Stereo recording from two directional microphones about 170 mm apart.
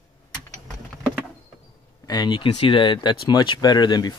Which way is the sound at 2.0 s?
25° left (ahead or behind).